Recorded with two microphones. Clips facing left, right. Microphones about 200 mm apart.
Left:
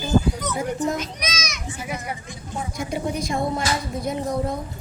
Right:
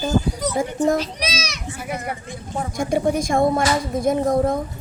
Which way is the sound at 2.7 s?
50° right (ahead or behind).